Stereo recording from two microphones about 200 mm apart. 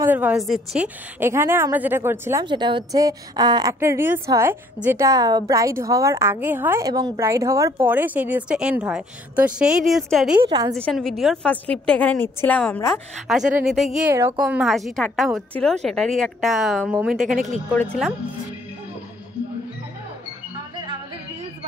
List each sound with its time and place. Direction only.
0.0 s a woman's voice: 10° right (ahead or behind)
2.4 s a woman's voice: 25° right (ahead or behind); by 13.0 s 10° left (ahead or behind)
13.3 s a woman's voice: centre (ahead or behind)
14.1 s a woman's voice: 15° right (ahead or behind)
14.4 s a woman's voice: centre (ahead or behind)